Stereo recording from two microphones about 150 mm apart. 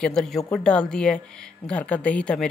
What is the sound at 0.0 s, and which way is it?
Speech, 5° left (ahead or behind).